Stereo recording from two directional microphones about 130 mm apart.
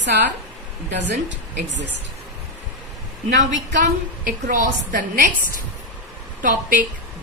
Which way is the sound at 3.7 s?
75° right (ahead or behind).